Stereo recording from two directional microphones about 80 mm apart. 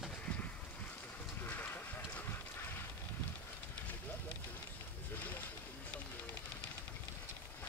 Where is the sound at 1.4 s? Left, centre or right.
Left.